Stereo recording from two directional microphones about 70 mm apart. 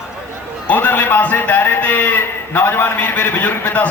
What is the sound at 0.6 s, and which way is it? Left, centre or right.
A man's voice, left.